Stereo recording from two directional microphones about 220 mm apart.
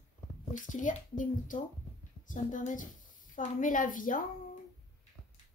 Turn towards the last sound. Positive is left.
turn(degrees=35)  # may be behind; listen again after turning